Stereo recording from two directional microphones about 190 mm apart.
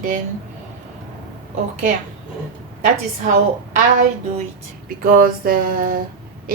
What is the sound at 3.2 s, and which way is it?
A woman's voice, 40° right (ahead or behind).